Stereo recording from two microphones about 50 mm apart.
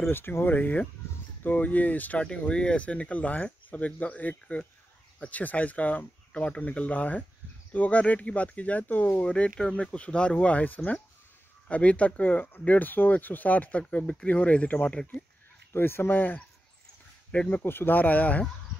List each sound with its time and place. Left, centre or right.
0.1 s speech: left
2.2 s speech: left
9.2 s speech: left
15.7 s speech: left
17.5 s speech: left